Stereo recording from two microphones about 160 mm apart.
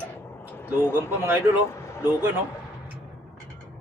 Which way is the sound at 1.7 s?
15° left (ahead or behind).